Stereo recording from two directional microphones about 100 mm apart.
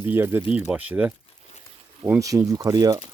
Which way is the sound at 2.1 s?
35° right (ahead or behind).